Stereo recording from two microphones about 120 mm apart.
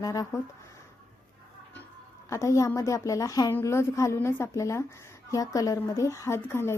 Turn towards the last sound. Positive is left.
turn(degrees=20)  # may be behind; listen again after turning